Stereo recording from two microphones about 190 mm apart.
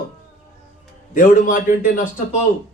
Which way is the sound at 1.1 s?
45° left (ahead or behind).